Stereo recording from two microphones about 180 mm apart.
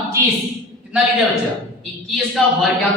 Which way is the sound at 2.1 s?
Centre (ahead or behind).